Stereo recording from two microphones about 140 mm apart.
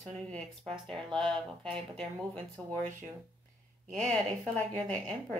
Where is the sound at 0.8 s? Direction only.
5° left (ahead or behind).